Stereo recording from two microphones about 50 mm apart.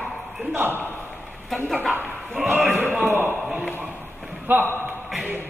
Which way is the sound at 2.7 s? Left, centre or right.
Right.